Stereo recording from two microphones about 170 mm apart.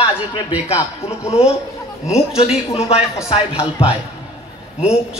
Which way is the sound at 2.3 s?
35° left (ahead or behind).